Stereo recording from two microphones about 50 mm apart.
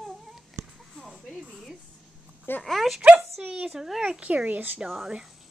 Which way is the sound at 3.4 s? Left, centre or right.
Centre.